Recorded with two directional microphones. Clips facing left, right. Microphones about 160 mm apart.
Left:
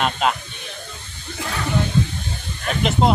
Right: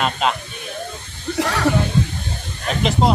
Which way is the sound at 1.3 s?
75° right (ahead or behind).